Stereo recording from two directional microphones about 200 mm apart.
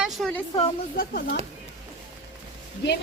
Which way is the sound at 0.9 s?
45° left (ahead or behind).